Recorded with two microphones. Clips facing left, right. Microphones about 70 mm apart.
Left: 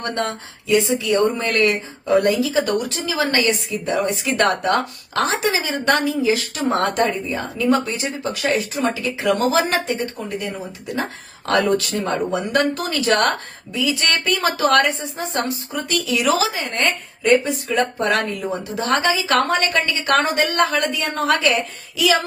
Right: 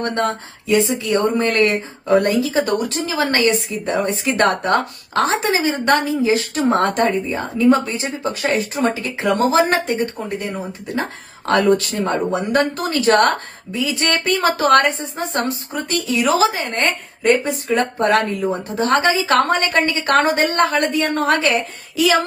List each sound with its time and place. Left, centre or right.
0.0 s speech: right
11.4 s a woman's voice: right